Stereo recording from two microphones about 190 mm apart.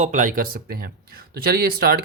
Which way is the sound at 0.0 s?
40° right (ahead or behind).